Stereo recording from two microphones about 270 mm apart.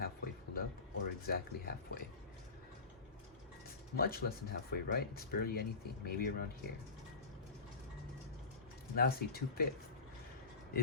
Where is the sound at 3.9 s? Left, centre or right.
Left.